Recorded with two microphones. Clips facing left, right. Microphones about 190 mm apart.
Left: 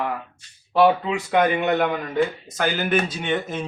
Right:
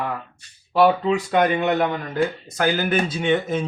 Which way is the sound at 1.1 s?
5° left (ahead or behind).